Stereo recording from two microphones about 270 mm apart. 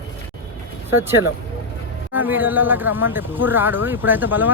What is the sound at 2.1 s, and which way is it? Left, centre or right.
Speech, centre.